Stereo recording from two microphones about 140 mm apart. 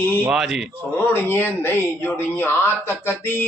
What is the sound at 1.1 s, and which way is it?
Speech, 15° left (ahead or behind).